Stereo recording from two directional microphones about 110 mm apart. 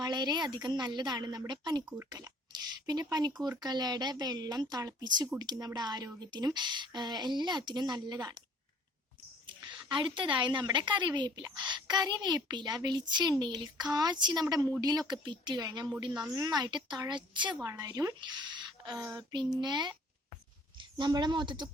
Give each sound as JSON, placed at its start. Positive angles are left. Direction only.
{"t": 0.0, "sound": "speech", "side_deg": -40}
{"t": 9.5, "sound": "a woman's voice", "side_deg": -45}
{"t": 17.7, "sound": "speech", "side_deg": -30}
{"t": 18.2, "sound": "a sound", "side_deg": -45}
{"t": 19.0, "sound": "speech", "side_deg": -40}